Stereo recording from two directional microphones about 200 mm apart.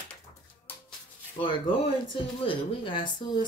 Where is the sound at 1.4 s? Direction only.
25° left (ahead or behind).